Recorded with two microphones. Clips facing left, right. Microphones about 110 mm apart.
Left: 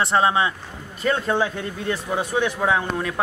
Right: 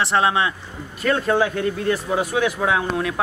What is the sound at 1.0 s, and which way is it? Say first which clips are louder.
Speech: right 2 dB; centre (ahead or behind).